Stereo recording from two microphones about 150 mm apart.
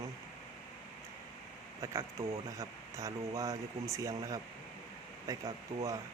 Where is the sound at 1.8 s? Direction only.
20° right (ahead or behind).